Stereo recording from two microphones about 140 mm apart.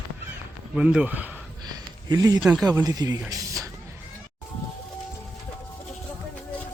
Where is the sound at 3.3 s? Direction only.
25° right (ahead or behind).